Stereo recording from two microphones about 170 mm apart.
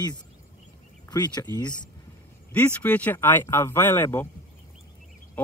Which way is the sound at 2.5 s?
10° left (ahead or behind).